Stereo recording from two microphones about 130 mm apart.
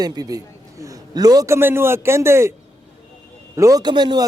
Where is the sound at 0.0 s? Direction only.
30° right (ahead or behind).